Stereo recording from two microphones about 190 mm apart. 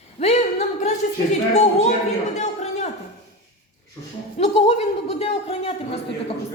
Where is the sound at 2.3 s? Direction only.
35° left (ahead or behind).